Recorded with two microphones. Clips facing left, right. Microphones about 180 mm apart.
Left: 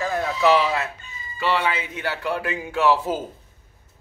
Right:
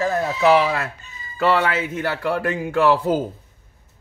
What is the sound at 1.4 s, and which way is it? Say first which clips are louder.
Speech: right 4 dB; 55° right (ahead or behind).